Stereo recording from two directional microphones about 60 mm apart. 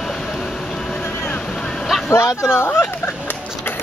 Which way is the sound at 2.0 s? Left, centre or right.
Left.